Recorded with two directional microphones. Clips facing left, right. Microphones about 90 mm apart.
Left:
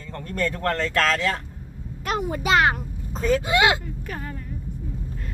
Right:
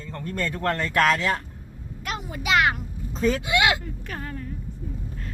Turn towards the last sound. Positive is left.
turn(degrees=15)  # may be behind; listen again after turning